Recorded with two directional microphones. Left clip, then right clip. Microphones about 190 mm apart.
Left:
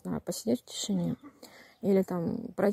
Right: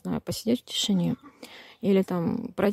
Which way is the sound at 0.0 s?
25° right (ahead or behind).